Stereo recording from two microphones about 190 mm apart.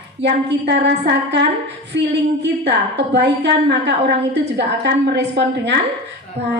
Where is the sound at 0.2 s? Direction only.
65° right (ahead or behind).